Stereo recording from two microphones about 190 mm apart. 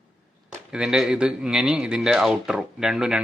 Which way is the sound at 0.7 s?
5° right (ahead or behind).